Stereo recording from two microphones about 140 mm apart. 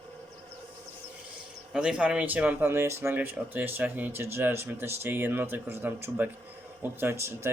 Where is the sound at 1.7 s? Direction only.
5° right (ahead or behind).